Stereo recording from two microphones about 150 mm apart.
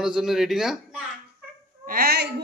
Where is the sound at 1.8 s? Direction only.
80° right.